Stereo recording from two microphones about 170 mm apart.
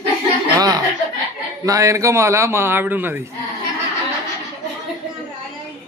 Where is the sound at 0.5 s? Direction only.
20° right (ahead or behind).